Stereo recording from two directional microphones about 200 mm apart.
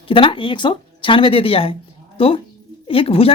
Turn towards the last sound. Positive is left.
turn(degrees=30)  # may be behind; listen again after turning